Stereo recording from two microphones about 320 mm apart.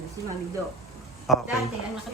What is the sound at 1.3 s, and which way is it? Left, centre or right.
Speech, centre.